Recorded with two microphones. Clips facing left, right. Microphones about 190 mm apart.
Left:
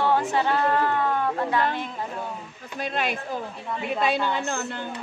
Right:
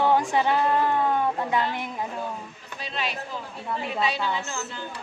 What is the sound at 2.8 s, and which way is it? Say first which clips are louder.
A woman's voice: left 4 dB; 50° left (ahead or behind).